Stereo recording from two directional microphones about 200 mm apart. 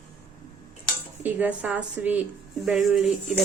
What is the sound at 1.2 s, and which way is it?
Speech, 10° right (ahead or behind).